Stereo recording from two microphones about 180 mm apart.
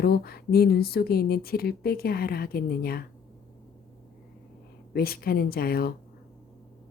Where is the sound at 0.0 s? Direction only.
60° left (ahead or behind).